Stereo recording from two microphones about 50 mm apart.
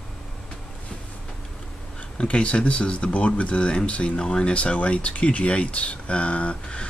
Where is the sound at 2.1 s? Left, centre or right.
Left.